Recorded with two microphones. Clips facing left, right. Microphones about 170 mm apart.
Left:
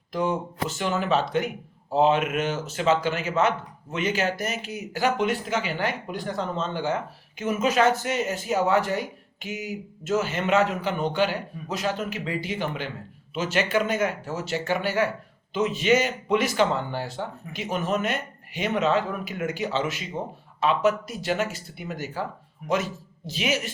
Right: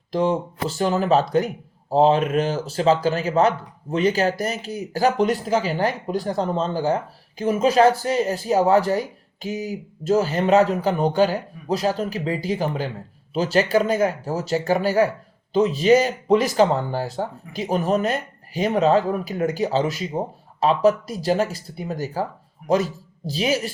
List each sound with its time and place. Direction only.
0.1 s speech: 30° right (ahead or behind)